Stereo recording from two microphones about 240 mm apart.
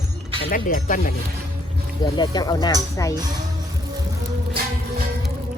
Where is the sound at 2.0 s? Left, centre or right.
Centre.